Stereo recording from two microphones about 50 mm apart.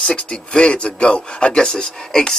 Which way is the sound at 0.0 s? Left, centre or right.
Centre.